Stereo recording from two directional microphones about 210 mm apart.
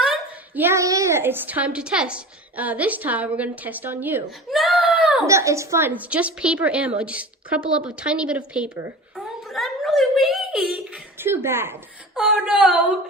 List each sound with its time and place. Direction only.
0.0 s a woman's voice: 5° right (ahead or behind)
9.1 s a sound: centre (ahead or behind)
10.9 s a woman's voice: 10° right (ahead or behind)